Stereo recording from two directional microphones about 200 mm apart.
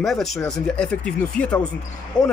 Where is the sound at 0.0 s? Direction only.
Centre (ahead or behind).